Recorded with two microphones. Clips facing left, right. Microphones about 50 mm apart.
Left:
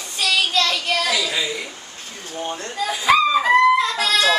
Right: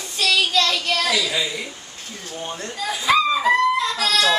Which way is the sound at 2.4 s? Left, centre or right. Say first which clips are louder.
Left 3 dB; centre.